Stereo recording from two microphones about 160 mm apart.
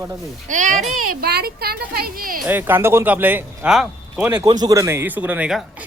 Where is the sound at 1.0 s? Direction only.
80° right; by 2.4 s 65° right (ahead or behind).